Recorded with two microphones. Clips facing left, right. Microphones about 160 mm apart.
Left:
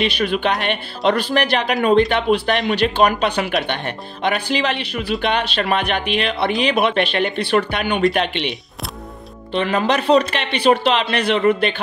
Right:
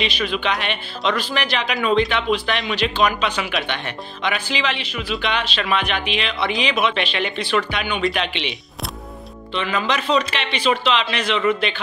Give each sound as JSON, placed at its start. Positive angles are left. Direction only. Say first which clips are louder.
{"t": 0.0, "sound": "speech", "louder": "left 4 dB", "side_deg": 50}